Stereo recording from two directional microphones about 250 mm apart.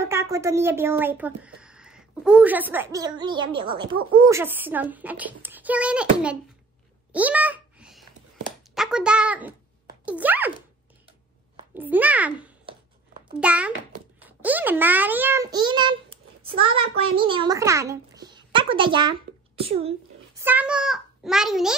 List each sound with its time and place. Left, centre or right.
0.0 s speech: centre
7.1 s a sound: centre
8.7 s a child's voice: centre
11.7 s a child's voice: centre; by 19.9 s right
20.3 s a child's voice: centre